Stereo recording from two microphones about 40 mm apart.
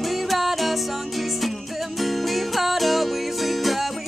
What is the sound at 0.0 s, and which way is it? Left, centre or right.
Music, centre.